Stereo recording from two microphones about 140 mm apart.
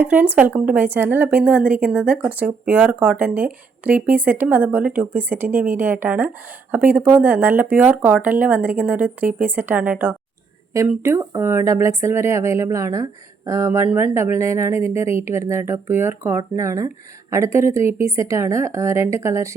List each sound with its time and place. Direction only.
0.0 s speech: 10° right (ahead or behind)